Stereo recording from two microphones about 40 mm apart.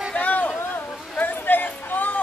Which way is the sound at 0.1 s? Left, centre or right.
Left.